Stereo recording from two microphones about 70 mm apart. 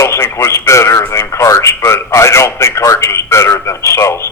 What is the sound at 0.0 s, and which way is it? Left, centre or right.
A man's voice, left.